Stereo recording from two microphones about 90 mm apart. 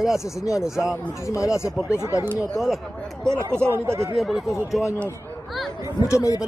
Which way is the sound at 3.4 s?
30° right (ahead or behind).